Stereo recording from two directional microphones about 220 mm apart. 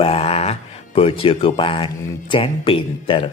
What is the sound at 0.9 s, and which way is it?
Speech, 25° left (ahead or behind).